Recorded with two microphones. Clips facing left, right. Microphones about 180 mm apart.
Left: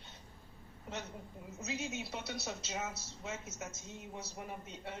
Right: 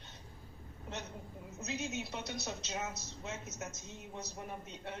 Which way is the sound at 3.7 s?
50° left (ahead or behind).